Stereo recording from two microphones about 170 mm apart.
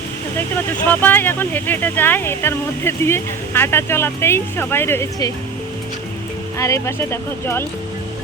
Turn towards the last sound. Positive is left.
turn(degrees=15)  # may be behind; listen again after turning